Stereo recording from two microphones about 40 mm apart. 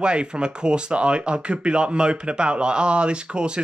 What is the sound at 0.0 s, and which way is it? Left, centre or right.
Speech, right.